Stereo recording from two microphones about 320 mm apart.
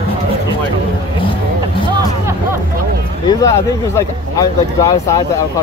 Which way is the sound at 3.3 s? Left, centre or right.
Centre.